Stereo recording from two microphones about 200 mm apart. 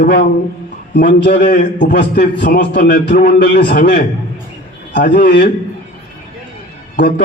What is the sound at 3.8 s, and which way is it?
Speech, 45° left (ahead or behind).